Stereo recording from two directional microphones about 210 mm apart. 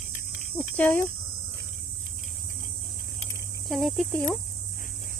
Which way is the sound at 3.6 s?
Centre (ahead or behind).